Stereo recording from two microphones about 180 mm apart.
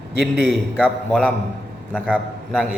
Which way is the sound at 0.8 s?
5° left (ahead or behind).